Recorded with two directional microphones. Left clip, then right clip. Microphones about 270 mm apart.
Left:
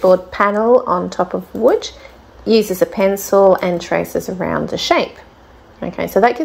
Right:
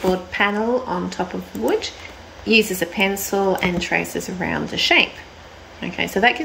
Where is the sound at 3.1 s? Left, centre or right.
Centre.